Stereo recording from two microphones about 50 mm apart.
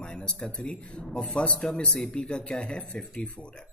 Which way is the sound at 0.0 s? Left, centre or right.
Centre.